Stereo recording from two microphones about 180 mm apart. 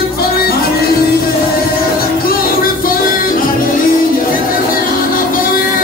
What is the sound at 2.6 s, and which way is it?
Music, 50° left (ahead or behind).